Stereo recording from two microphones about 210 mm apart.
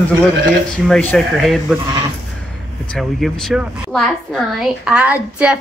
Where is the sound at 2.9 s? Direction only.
Centre (ahead or behind).